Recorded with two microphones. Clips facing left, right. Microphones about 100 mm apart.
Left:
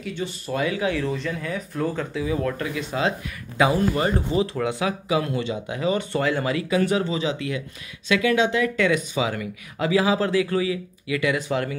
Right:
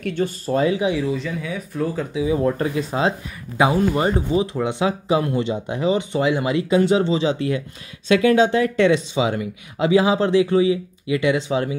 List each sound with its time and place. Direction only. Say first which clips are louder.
0.0 s speech: right 7 dB; 50° right (ahead or behind)
0.5 s speech: right 4 dB; 30° right (ahead or behind)
1.1 s speech: right 2 dB; 5° right (ahead or behind)
2.1 s speech: right 9 dB; 20° right (ahead or behind)